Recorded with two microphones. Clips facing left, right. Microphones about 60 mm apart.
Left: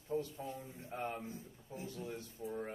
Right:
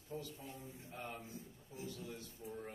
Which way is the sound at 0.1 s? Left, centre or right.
Left.